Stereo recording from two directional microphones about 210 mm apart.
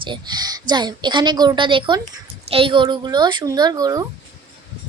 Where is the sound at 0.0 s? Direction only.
20° right (ahead or behind).